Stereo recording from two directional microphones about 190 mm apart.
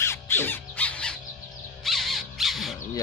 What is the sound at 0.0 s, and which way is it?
Squawk, 10° left (ahead or behind).